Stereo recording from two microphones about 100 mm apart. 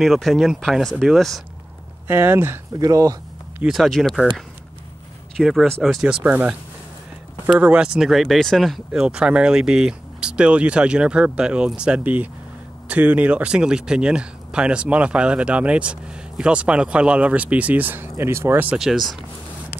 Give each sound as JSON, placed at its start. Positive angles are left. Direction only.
{"t": 0.0, "sound": "speech", "side_deg": 0}
{"t": 2.0, "sound": "speech", "side_deg": -20}
{"t": 2.8, "sound": "speech", "side_deg": -35}
{"t": 3.6, "sound": "speech", "side_deg": 0}
{"t": 5.4, "sound": "speech", "side_deg": 0}
{"t": 6.2, "sound": "speech", "side_deg": -15}
{"t": 7.5, "sound": "speech", "side_deg": -15}
{"t": 18.8, "sound": "speech", "side_deg": 0}